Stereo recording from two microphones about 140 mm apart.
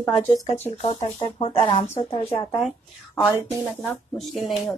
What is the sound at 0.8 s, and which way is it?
Speech, 45° left (ahead or behind).